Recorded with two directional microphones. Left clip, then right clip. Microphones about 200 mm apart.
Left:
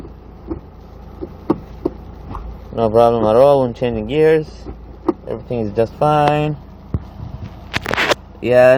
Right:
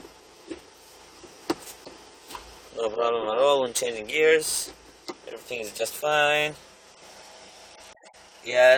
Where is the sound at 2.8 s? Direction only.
15° right (ahead or behind).